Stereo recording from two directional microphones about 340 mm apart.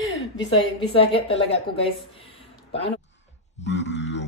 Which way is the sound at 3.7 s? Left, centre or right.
Left.